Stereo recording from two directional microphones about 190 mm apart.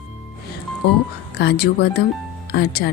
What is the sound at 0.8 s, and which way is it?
Speech, 65° left (ahead or behind).